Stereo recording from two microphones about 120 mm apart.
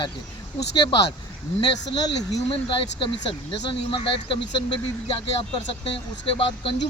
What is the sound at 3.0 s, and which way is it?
Speech, 45° left (ahead or behind).